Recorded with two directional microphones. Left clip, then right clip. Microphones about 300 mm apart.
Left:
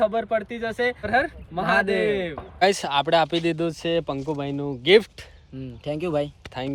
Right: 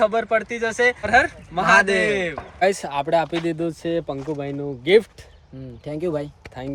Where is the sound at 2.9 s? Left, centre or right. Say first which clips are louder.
Left 1 dB; left.